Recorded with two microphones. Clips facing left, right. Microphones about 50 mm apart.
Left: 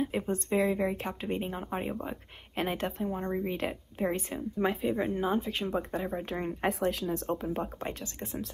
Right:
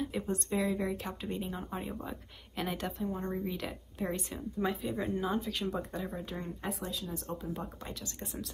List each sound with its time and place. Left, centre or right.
0.0 s speech: left
6.3 s speech: left
7.5 s speech: left